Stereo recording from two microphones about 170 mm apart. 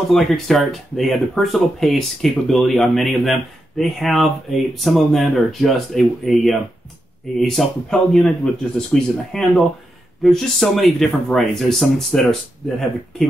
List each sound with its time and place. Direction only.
0.1 s speech: centre (ahead or behind)